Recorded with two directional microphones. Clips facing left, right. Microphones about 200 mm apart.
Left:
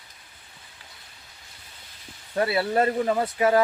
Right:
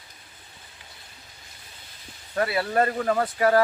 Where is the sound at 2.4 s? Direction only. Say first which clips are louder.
Left 1 dB; 25° left (ahead or behind).